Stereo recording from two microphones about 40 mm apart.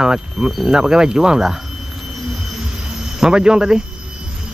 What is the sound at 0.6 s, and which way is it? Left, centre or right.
Speech, centre.